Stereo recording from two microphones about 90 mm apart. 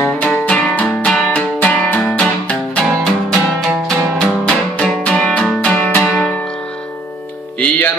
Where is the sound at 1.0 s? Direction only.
15° left (ahead or behind).